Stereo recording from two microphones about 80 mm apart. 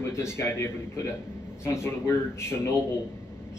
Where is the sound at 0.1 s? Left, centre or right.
Left.